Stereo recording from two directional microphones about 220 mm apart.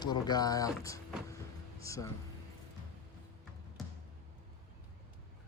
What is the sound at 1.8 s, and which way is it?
Speech, 15° left (ahead or behind).